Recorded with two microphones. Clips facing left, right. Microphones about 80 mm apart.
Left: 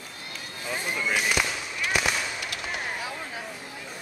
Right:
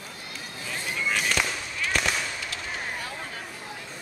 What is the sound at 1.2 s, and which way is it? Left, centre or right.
Fireworks, centre.